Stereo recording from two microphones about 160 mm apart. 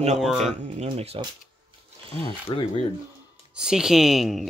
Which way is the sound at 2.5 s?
30° left (ahead or behind).